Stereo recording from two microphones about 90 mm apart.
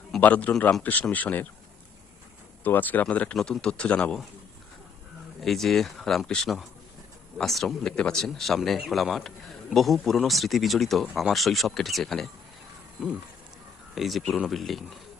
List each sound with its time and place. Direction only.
0.2 s speech: 15° left (ahead or behind)
2.6 s speech: 20° left (ahead or behind)
5.4 s speech: centre (ahead or behind)
13.9 s speech: centre (ahead or behind)